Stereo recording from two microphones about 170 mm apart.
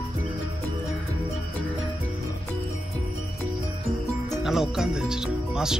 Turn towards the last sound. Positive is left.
turn(degrees=-5)  # may be behind; listen again after turning